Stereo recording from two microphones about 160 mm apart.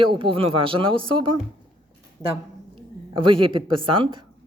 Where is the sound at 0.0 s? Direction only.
30° right (ahead or behind).